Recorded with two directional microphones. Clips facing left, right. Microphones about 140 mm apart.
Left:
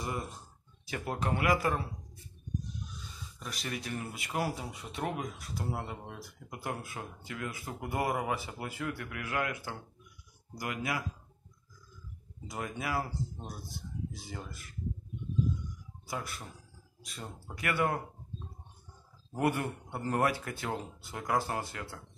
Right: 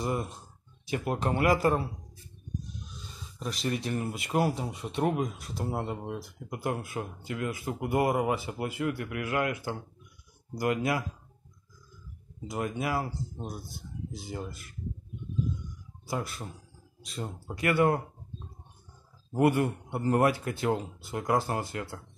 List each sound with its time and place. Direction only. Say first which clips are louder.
0.8 s speech: right 4 dB; 20° right (ahead or behind)
3.3 s speech: right 8 dB; 25° right (ahead or behind)
12.4 s speech: right 5 dB; 25° right (ahead or behind)
14.1 s speech: right 6 dB; 20° right (ahead or behind)
16.1 s speech: right 5 dB; 30° right (ahead or behind)
19.3 s speech: right 6 dB; 20° right (ahead or behind)